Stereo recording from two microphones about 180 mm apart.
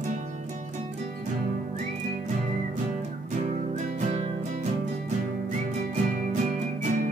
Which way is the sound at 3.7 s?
40° right (ahead or behind).